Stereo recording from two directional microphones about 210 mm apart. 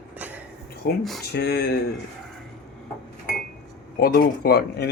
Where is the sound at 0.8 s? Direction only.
45° left (ahead or behind).